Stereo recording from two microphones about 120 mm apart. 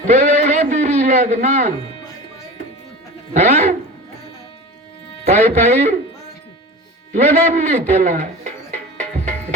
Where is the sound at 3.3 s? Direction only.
70° right (ahead or behind).